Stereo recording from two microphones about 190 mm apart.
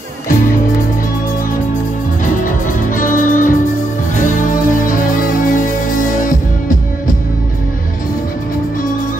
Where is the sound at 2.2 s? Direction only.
45° left (ahead or behind).